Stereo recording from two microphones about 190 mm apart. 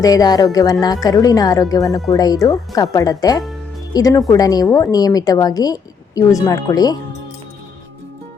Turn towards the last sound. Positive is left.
turn(degrees=20)  # may be behind; listen again after turning